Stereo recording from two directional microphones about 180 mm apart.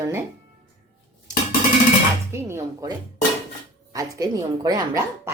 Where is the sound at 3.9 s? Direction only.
20° right (ahead or behind).